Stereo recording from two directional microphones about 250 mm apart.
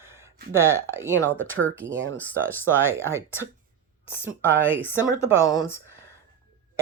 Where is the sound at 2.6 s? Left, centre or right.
Centre.